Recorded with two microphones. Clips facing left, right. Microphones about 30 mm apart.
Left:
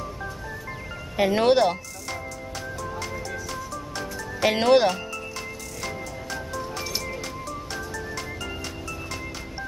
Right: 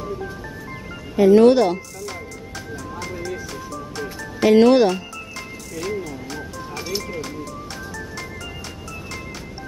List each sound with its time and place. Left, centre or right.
1.1 s speech: left
4.5 s speech: centre
5.8 s music: centre